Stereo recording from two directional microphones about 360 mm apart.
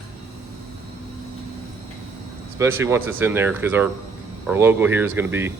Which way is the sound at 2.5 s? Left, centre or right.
Centre.